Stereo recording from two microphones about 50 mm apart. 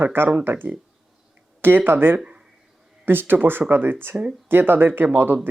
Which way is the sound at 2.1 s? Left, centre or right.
Right.